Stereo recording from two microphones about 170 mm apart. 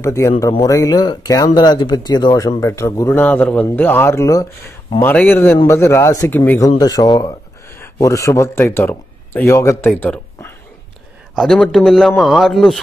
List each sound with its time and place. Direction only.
0.0 s speech: 15° left (ahead or behind)
6.8 s a man's voice: 20° left (ahead or behind); by 12.8 s centre (ahead or behind)